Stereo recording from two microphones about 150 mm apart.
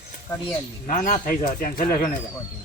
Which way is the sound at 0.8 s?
60° left (ahead or behind).